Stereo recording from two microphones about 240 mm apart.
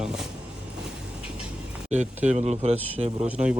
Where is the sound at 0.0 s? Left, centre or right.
Centre.